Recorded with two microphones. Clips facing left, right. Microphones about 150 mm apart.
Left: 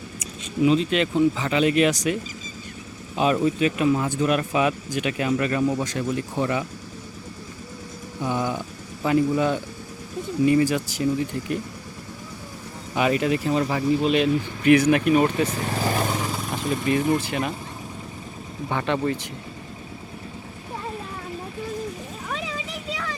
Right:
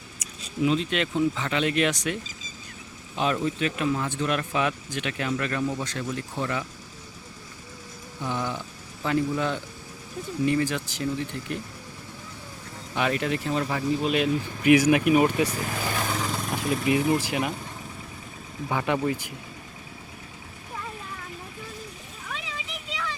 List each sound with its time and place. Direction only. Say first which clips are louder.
0.6 s speech: left 5 dB; centre (ahead or behind)
3.2 s speech: left 5 dB; 10° left (ahead or behind)
8.2 s speech: left 4 dB; 15° left (ahead or behind)
12.9 s speech: left 5 dB; 5° left (ahead or behind); by 15.5 s 10° right (ahead or behind)
15.7 s speech: left 5 dB; 35° left (ahead or behind)
16.1 s speech: left 1 dB; 10° left (ahead or behind); by 17.5 s 10° right (ahead or behind)
18.7 s speech: left 1 dB; 10° right (ahead or behind)